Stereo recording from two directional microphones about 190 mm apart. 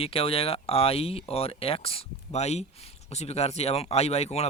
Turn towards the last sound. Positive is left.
turn(degrees=35)  # may be behind; listen again after turning